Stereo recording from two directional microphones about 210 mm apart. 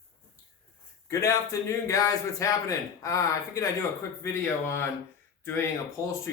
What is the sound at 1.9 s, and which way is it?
Speech, 15° left (ahead or behind).